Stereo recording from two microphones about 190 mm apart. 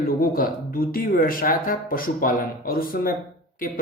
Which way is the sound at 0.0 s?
50° left (ahead or behind).